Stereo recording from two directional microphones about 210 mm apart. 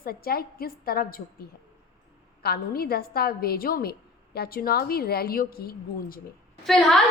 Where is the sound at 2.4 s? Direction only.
45° left (ahead or behind).